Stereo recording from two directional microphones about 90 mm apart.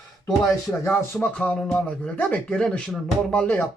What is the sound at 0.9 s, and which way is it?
Speech, 10° left (ahead or behind).